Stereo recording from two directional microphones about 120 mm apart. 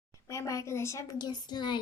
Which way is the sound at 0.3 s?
25° left (ahead or behind).